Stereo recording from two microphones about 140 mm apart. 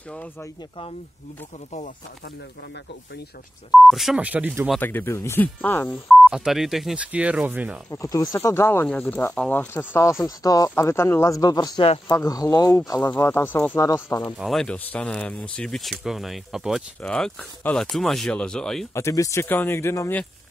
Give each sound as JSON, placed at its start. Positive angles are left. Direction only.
{"t": 3.7, "sound": "speech", "side_deg": 0}
{"t": 4.7, "sound": "speech", "side_deg": 15}
{"t": 6.0, "sound": "speech", "side_deg": 0}
{"t": 7.9, "sound": "speech", "side_deg": 25}
{"t": 13.0, "sound": "speech", "side_deg": 15}
{"t": 14.3, "sound": "speech", "side_deg": 0}
{"t": 18.9, "sound": "speech", "side_deg": 20}